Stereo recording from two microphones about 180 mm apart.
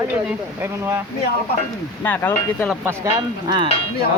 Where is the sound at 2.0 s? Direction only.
10° left (ahead or behind).